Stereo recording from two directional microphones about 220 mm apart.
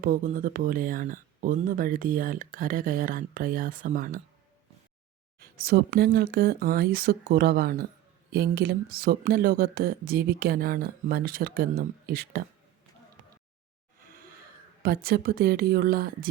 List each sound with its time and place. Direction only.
0.0 s speech: 40° right (ahead or behind)
5.6 s speech: 45° right (ahead or behind)
14.8 s speech: 45° right (ahead or behind)